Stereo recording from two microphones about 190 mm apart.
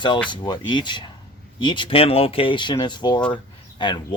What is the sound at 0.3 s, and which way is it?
Speech, 25° left (ahead or behind).